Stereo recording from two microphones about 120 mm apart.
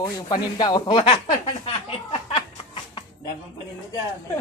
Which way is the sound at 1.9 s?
50° left (ahead or behind).